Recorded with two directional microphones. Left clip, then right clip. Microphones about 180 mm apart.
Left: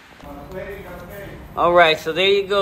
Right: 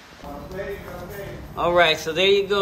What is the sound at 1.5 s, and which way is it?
A man's voice, 10° right (ahead or behind).